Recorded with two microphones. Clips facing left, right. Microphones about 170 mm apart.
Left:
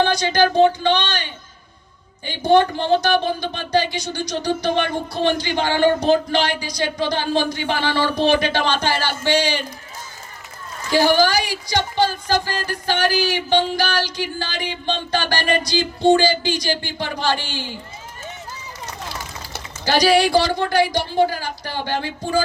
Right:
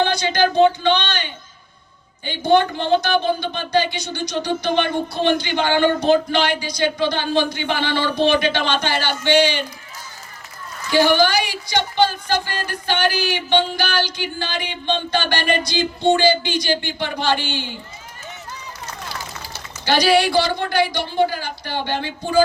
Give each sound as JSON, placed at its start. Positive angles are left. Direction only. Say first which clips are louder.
{"t": 0.0, "sound": "speech", "louder": "left 1 dB", "side_deg": 40}
{"t": 2.5, "sound": "speech", "louder": "left 1 dB", "side_deg": 35}
{"t": 10.9, "sound": "speech", "louder": "even", "side_deg": 35}
{"t": 19.8, "sound": "speech", "louder": "even", "side_deg": 35}